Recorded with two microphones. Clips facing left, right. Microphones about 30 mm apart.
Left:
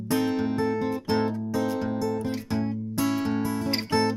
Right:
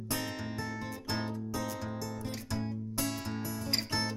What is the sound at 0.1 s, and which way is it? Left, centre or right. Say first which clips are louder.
Music: left 12 dB; left.